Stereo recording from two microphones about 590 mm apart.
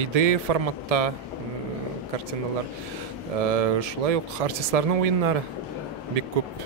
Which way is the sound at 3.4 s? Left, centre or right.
Right.